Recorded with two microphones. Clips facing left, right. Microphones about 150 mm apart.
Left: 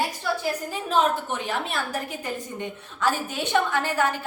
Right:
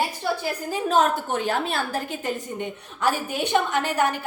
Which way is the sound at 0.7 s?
40° right (ahead or behind).